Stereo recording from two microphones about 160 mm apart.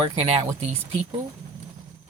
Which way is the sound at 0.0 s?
35° right (ahead or behind).